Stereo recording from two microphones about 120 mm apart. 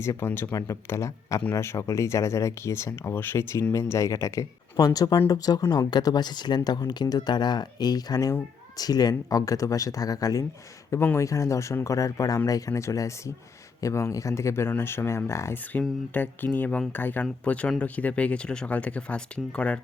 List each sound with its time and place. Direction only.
0.0 s speech: 20° left (ahead or behind)